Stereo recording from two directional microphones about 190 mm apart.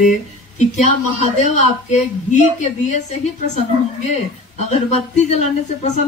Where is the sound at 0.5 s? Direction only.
40° left (ahead or behind).